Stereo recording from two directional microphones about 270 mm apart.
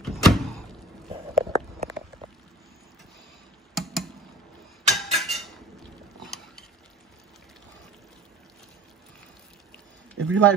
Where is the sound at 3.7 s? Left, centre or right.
Centre.